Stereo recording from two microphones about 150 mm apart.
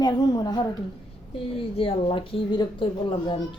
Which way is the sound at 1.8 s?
35° left (ahead or behind).